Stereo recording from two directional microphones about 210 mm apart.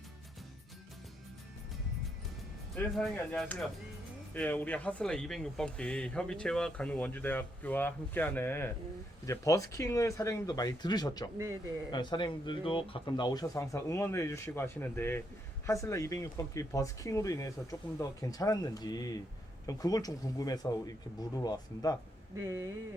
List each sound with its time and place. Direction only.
2.7 s speech: 5° left (ahead or behind); by 21.9 s 20° left (ahead or behind)
22.4 s speech: 15° right (ahead or behind)